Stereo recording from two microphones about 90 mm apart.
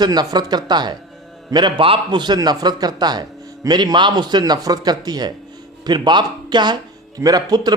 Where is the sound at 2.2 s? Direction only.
50° right (ahead or behind).